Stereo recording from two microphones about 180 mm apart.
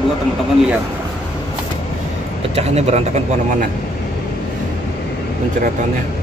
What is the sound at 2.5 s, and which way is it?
Speech, 35° right (ahead or behind).